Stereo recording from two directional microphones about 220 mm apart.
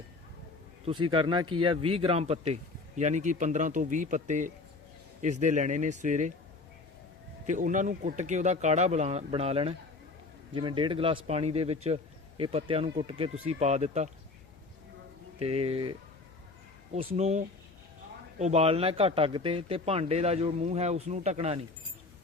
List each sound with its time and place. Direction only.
1.1 s speech: 20° right (ahead or behind)
7.4 s speech: 35° right (ahead or behind)
15.4 s speech: 25° right (ahead or behind)